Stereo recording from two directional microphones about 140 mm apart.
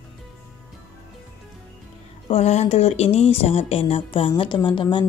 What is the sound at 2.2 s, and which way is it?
Speech, 50° left (ahead or behind).